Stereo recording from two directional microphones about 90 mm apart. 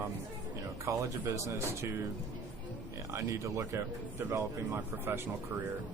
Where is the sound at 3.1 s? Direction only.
35° right (ahead or behind).